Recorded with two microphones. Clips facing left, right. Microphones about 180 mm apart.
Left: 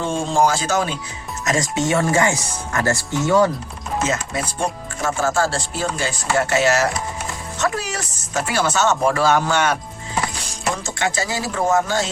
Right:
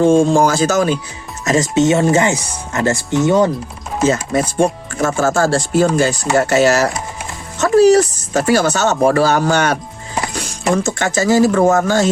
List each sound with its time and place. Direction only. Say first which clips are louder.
0.0 s speech: right 8 dB; 45° right (ahead or behind)
1.5 s speech: right 7 dB; 25° right (ahead or behind)
4.0 s speech: right 10 dB; 40° right (ahead or behind)
10.8 s speech: right 8 dB; 45° right (ahead or behind)